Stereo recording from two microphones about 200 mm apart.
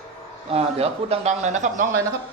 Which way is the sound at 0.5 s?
30° right (ahead or behind).